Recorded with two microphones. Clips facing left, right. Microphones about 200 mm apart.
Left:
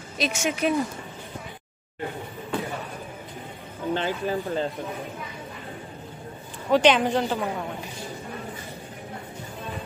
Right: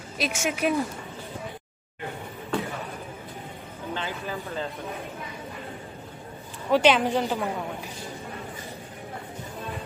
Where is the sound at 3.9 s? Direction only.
35° left (ahead or behind).